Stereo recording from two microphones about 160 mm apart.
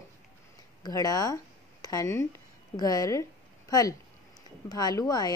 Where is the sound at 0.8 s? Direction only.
25° left (ahead or behind).